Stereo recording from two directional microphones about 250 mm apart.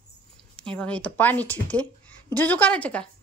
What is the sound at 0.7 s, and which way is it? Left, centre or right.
A woman's voice, centre.